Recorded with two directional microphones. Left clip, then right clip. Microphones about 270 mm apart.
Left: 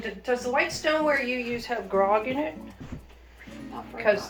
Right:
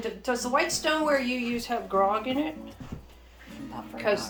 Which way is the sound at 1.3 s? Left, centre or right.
Centre.